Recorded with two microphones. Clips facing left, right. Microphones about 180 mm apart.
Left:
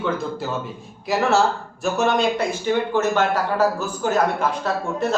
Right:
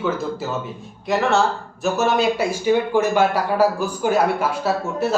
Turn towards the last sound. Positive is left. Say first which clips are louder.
# right 2 dB
turn(degrees=-10)  # may be behind; listen again after turning